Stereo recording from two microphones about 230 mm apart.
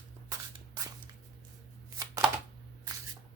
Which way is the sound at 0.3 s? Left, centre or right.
Centre.